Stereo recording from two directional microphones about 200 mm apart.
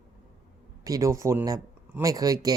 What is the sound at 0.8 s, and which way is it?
Speech, 15° right (ahead or behind).